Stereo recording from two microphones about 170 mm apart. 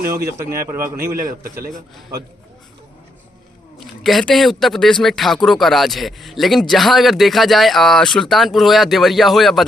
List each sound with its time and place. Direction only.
0.2 s a man's voice: 15° right (ahead or behind)
1.1 s a man's voice: 60° right (ahead or behind)
3.8 s speech: centre (ahead or behind)